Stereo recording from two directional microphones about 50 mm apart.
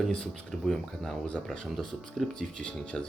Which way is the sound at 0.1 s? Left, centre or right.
Centre.